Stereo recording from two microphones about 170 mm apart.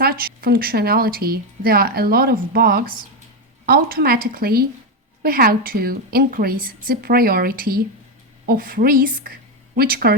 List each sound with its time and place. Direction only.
0.0 s speech: 65° right (ahead or behind)